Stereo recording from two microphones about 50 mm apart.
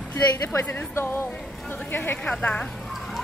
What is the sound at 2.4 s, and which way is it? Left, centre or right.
Speech, left.